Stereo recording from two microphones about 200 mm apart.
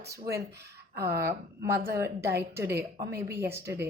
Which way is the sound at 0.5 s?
55° right (ahead or behind).